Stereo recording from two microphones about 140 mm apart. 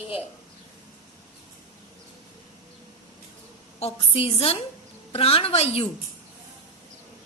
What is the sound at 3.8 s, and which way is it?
A woman's voice, 45° left (ahead or behind).